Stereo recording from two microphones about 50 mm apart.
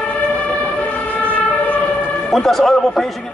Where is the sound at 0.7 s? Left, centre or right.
Left.